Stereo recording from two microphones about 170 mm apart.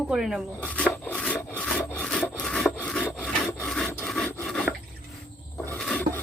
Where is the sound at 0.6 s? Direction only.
5° left (ahead or behind).